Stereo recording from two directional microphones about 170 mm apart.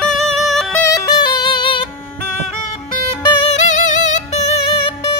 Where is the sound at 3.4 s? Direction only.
45° left (ahead or behind).